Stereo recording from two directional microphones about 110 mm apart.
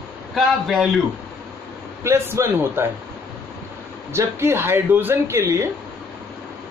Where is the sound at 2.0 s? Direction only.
25° right (ahead or behind).